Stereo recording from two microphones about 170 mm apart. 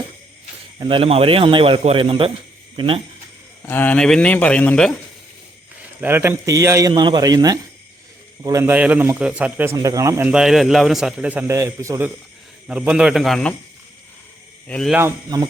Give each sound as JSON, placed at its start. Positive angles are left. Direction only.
{"t": 0.8, "sound": "speech", "side_deg": -30}
{"t": 3.7, "sound": "speech", "side_deg": 10}
{"t": 6.0, "sound": "a man's voice", "side_deg": -10}
{"t": 10.2, "sound": "a man's voice", "side_deg": -5}
{"t": 14.7, "sound": "speech", "side_deg": 5}
{"t": 14.9, "sound": "a man's voice", "side_deg": -20}